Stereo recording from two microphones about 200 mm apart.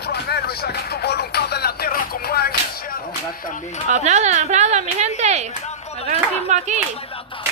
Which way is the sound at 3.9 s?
35° right (ahead or behind).